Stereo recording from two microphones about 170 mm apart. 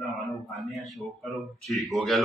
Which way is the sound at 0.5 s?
Centre (ahead or behind).